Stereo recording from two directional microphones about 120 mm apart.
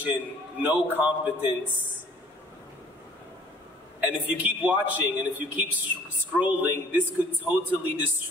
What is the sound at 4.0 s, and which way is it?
A man's voice, 15° right (ahead or behind).